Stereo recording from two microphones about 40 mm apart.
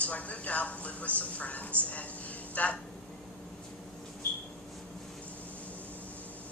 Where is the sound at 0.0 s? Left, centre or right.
Left.